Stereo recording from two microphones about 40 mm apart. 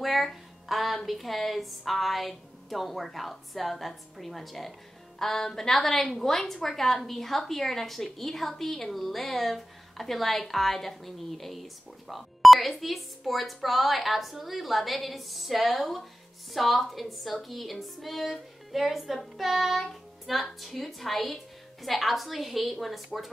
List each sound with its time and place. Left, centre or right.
0.0 s a woman's voice: centre